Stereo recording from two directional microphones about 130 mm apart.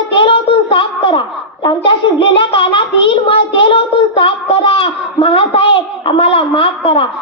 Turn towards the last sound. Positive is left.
turn(degrees=45)  # may be behind; listen again after turning